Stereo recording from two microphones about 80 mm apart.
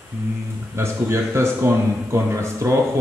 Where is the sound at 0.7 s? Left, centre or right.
Right.